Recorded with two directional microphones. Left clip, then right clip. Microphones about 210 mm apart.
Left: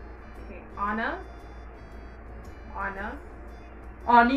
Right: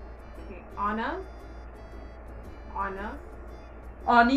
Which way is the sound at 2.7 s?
Centre (ahead or behind).